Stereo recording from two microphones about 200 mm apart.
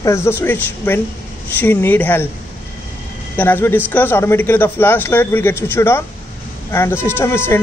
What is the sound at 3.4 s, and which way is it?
A man's voice, 10° left (ahead or behind).